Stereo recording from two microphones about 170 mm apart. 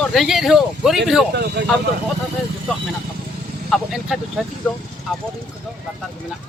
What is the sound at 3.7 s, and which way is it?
Speech, centre (ahead or behind).